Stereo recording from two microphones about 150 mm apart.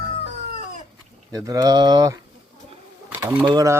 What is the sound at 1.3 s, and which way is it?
Speech, 25° right (ahead or behind).